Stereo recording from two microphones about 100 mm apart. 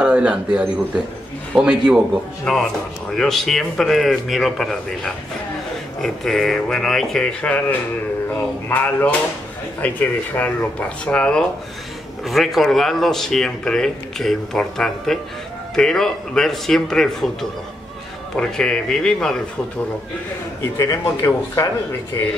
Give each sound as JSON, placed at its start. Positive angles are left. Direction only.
{"t": 0.0, "sound": "speech", "side_deg": -10}
{"t": 2.5, "sound": "speech", "side_deg": 5}
{"t": 8.6, "sound": "speech", "side_deg": 15}
{"t": 12.3, "sound": "speech", "side_deg": 0}
{"t": 20.7, "sound": "speech", "side_deg": 30}